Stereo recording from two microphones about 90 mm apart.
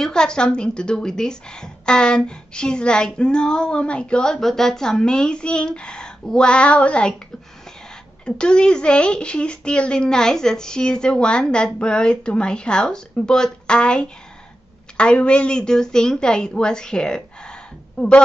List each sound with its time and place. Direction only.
0.0 s a woman's voice: 10° left (ahead or behind)
8.3 s a woman's voice: 10° left (ahead or behind)